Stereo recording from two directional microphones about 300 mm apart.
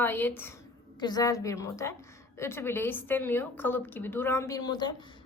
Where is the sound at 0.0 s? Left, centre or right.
Centre.